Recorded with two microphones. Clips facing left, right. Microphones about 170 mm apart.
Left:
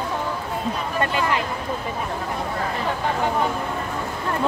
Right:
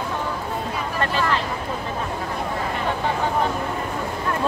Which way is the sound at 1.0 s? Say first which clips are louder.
Even; 15° left (ahead or behind).